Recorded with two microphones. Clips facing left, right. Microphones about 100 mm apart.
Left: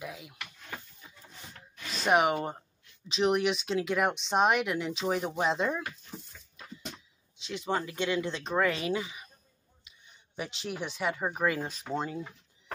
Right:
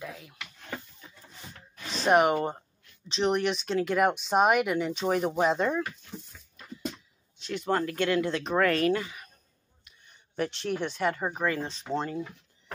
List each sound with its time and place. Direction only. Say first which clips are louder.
0.0 s a sound: right 1 dB; 20° left (ahead or behind)
1.9 s speech: right 3 dB; centre (ahead or behind)
7.4 s speech: right 4 dB; centre (ahead or behind)